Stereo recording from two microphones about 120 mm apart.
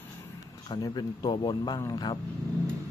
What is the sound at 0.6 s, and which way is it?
Speech, 35° left (ahead or behind).